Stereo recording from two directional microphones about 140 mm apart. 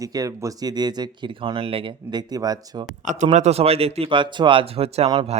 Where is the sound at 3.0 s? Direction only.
60° right (ahead or behind).